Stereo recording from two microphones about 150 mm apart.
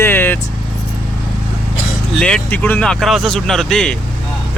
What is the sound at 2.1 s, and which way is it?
Speech, 5° left (ahead or behind).